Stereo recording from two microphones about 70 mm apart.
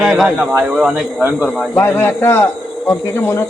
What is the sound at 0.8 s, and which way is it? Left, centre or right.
Speech, centre.